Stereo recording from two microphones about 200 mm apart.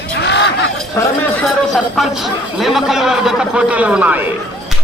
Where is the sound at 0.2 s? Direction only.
60° left (ahead or behind).